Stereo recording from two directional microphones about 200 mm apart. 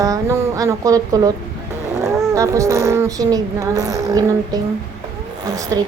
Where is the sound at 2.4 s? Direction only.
15° right (ahead or behind).